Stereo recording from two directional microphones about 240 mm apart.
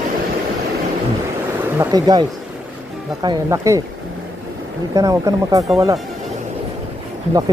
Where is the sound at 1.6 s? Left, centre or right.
Centre.